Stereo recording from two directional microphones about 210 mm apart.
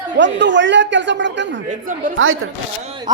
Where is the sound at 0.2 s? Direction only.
60° right (ahead or behind).